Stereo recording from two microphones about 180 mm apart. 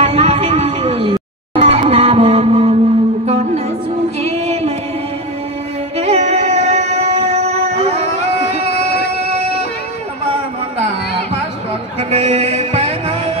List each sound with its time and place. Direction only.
0.0 s music: 35° right (ahead or behind)
5.9 s music: 35° right (ahead or behind)
12.0 s music: 35° right (ahead or behind)